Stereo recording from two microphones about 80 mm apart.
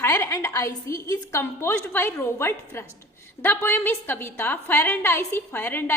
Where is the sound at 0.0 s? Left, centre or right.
Left.